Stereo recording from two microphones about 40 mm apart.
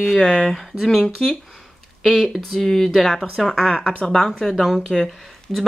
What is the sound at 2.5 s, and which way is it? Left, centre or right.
Speech, centre.